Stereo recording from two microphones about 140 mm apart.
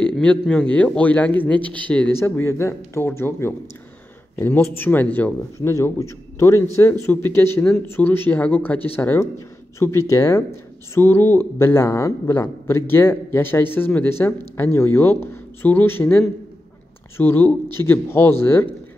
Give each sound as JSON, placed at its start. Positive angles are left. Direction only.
{"t": 0.0, "sound": "speech", "side_deg": 5}